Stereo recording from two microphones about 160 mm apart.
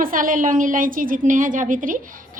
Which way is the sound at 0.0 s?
60° right (ahead or behind).